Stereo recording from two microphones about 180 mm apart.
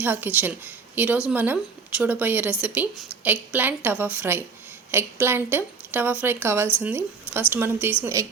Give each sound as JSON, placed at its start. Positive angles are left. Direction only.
{"t": 0.0, "sound": "a woman's voice", "side_deg": -10}